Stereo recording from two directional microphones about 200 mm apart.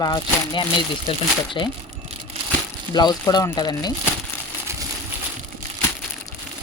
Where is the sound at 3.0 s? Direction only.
20° left (ahead or behind).